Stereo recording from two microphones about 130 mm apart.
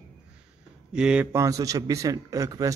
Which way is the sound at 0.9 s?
5° right (ahead or behind).